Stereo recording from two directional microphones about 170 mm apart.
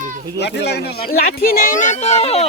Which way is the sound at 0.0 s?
50° right (ahead or behind).